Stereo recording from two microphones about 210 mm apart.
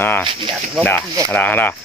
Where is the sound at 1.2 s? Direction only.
10° left (ahead or behind).